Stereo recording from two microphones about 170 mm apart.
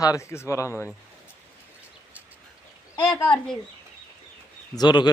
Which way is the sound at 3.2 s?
5° left (ahead or behind).